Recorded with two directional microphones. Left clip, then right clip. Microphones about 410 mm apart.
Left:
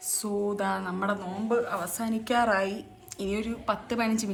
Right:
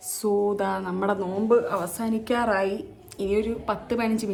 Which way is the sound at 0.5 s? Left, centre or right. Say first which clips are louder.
Right 3 dB; centre.